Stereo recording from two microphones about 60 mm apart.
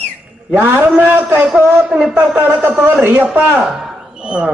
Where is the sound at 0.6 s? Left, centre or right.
Right.